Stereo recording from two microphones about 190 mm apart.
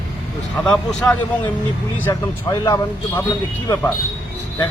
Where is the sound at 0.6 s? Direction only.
5° left (ahead or behind).